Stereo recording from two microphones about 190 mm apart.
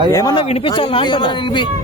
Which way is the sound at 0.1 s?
20° left (ahead or behind).